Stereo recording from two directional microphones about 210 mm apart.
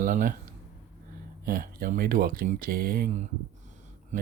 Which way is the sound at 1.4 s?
40° right (ahead or behind).